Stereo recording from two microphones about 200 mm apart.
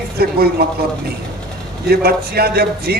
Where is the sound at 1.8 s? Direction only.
50° right (ahead or behind).